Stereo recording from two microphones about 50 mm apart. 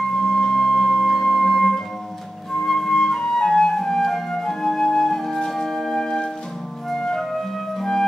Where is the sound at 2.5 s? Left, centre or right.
Centre.